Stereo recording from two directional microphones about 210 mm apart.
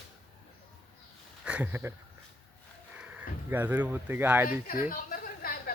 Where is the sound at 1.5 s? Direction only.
5° right (ahead or behind).